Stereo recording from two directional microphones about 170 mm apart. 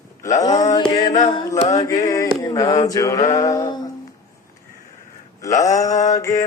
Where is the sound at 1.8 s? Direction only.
20° left (ahead or behind).